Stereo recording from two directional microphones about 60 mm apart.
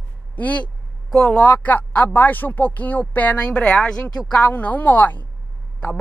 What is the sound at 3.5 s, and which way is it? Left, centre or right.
Speech, centre.